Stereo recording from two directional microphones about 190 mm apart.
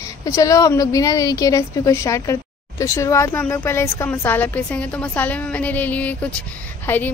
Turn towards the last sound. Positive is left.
turn(degrees=10)  # may be behind; listen again after turning